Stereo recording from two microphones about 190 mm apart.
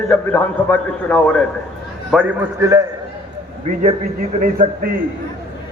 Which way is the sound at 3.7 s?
35° right (ahead or behind).